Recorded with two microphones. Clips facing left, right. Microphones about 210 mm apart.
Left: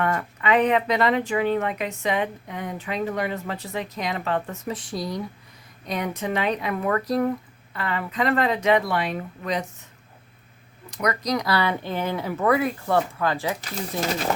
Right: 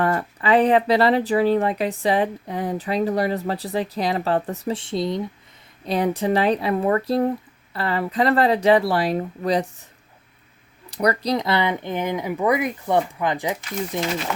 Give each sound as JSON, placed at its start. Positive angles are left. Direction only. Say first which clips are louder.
{"t": 0.0, "sound": "speech", "louder": "right 3 dB", "side_deg": -35}
{"t": 10.9, "sound": "speech", "louder": "right 4 dB", "side_deg": -35}
{"t": 14.3, "sound": "speech", "louder": "left 2 dB", "side_deg": 35}